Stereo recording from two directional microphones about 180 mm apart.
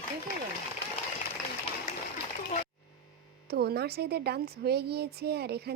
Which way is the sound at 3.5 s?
65° right (ahead or behind).